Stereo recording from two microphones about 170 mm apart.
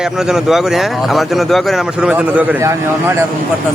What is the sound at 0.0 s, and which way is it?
Speech, 5° right (ahead or behind).